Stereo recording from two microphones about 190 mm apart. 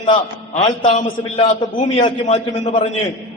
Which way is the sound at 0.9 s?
40° left (ahead or behind).